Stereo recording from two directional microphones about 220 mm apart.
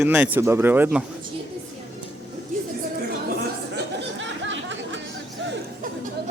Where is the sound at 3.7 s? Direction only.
55° right (ahead or behind).